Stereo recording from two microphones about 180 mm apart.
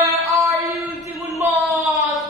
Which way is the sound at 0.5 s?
15° right (ahead or behind).